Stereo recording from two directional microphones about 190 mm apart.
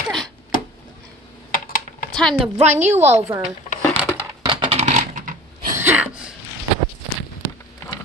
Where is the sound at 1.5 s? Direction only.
50° left (ahead or behind).